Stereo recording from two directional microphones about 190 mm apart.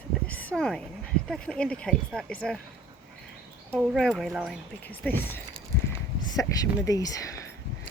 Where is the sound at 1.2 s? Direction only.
5° left (ahead or behind).